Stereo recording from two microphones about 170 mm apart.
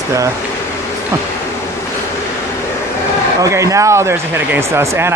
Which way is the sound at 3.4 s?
20° right (ahead or behind).